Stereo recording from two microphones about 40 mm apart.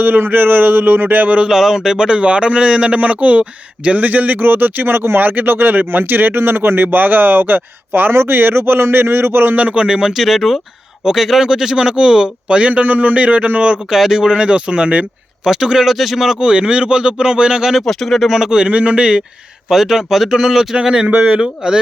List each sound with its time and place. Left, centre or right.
0.0 s speech: right
1.5 s speech: centre; by 6.8 s right
6.8 s speech: right
9.6 s speech: right
9.8 s speech: centre
10.2 s speech: centre; by 13.7 s right
13.9 s speech: centre; by 15.0 s right
15.4 s speech: centre
16.4 s speech: right
17.7 s speech: centre
18.3 s speech: centre
18.7 s speech: right
19.6 s speech: centre